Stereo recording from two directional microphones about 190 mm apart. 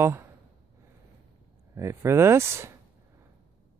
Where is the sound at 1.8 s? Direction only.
15° right (ahead or behind).